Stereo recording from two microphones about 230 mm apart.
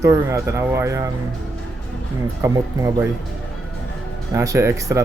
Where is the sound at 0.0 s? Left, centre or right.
Centre.